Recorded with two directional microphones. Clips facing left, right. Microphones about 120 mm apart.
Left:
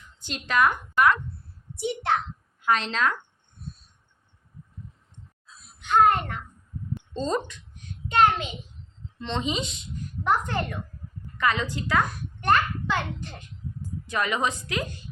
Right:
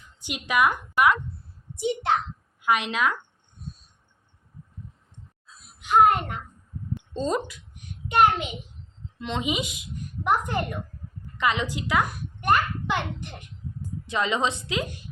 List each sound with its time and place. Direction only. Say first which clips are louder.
0.2 s a woman's voice: even; 15° right (ahead or behind)
5.8 s a woman's voice: right 1 dB; 10° right (ahead or behind)